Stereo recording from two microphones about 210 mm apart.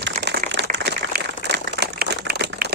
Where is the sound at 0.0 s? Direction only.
55° right (ahead or behind).